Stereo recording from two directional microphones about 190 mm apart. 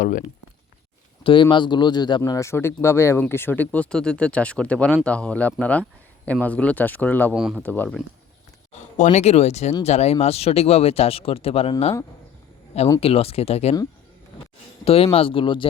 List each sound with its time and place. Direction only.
1.2 s speech: 25° left (ahead or behind); by 7.3 s 10° left (ahead or behind)
7.3 s speech: 5° right (ahead or behind)
7.6 s speech: 10° left (ahead or behind)
8.7 s speech: 40° left (ahead or behind)
13.0 s speech: 30° left (ahead or behind)
14.8 s speech: 30° left (ahead or behind)